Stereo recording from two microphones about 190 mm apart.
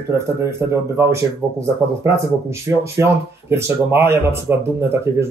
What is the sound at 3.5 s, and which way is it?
Speech, 15° right (ahead or behind).